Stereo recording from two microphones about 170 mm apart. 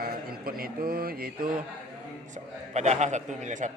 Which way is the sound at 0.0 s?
60° right (ahead or behind).